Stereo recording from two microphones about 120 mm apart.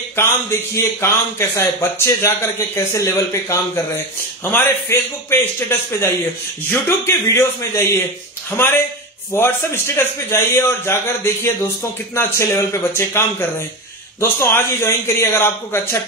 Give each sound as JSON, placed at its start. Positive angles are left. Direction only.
{"t": 0.1, "sound": "a man's voice", "side_deg": 20}